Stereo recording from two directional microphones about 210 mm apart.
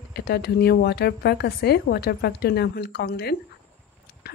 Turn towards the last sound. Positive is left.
turn(degrees=50)  # may be behind; listen again after turning